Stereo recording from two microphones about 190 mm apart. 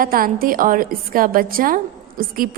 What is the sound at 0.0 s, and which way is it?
A woman's voice, 50° right (ahead or behind).